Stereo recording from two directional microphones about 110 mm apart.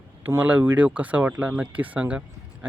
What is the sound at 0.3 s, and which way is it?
Speech, 20° right (ahead or behind).